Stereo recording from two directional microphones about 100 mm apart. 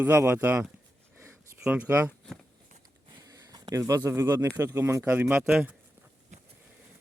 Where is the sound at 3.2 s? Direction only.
40° right (ahead or behind).